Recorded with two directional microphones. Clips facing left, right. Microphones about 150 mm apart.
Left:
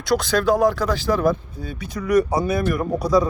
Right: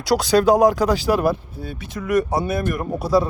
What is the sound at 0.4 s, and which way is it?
Speech, 15° right (ahead or behind).